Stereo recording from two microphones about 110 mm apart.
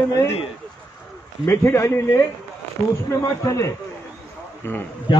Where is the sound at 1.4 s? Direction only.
20° left (ahead or behind).